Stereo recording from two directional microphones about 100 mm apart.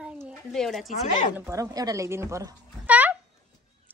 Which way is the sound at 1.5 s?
35° right (ahead or behind).